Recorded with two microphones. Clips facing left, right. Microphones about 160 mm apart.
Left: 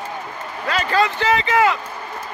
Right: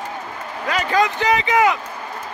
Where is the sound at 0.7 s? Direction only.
15° right (ahead or behind).